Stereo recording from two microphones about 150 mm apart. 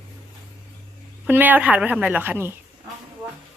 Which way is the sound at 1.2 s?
10° right (ahead or behind).